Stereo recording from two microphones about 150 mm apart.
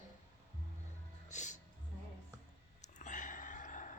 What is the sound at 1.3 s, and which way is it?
Music, 55° left (ahead or behind).